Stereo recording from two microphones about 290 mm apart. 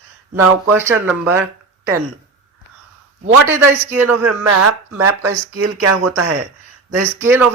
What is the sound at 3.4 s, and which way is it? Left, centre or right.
Speech, centre.